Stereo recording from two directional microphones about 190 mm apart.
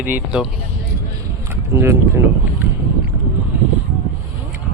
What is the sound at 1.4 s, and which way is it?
Speech, 15° right (ahead or behind).